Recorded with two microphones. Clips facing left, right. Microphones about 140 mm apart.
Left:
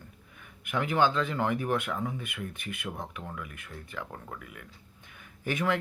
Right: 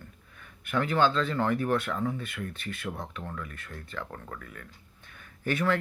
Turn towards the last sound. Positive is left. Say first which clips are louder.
# right 2 dB
turn(degrees=15)  # may be behind; listen again after turning